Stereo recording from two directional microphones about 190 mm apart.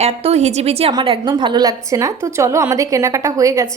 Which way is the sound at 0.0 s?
30° right (ahead or behind).